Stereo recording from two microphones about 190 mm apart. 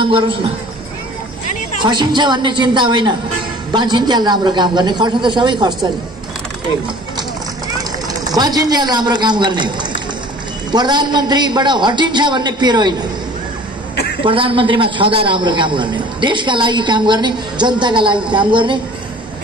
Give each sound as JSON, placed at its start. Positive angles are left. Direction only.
{"t": 0.0, "sound": "a man's voice", "side_deg": -25}
{"t": 1.8, "sound": "a man's voice", "side_deg": -25}
{"t": 8.3, "sound": "a man's voice", "side_deg": -20}
{"t": 14.2, "sound": "a man's voice", "side_deg": -30}